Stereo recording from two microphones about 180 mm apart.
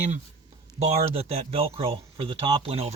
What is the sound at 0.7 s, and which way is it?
Speech, 35° right (ahead or behind).